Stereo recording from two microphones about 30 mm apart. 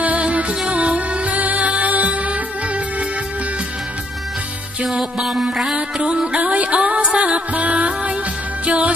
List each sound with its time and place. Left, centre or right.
0.2 s music: right
5.2 s music: centre
6.3 s music: right